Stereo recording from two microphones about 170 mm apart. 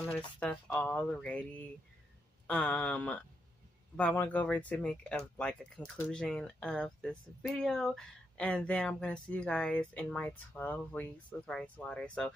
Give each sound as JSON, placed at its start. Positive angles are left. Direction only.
{"t": 0.4, "sound": "speech", "side_deg": 10}
{"t": 2.4, "sound": "speech", "side_deg": 5}